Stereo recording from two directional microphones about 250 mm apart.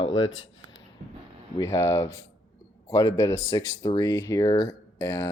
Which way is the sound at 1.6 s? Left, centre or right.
Centre.